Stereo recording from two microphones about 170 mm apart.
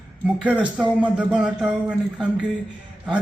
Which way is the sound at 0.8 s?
5° right (ahead or behind).